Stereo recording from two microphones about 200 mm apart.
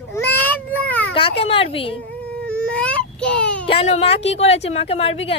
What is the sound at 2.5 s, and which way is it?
Baby cry, 5° left (ahead or behind).